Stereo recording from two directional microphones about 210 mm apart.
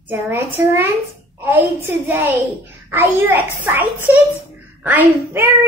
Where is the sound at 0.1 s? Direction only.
10° right (ahead or behind).